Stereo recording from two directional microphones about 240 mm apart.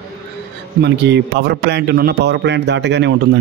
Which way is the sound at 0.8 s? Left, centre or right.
Right.